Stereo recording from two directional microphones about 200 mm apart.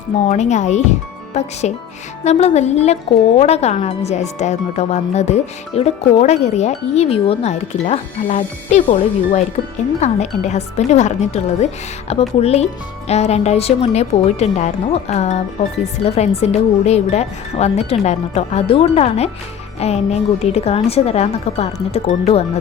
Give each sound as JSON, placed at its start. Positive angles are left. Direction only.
{"t": 0.3, "sound": "a woman's voice", "side_deg": 35}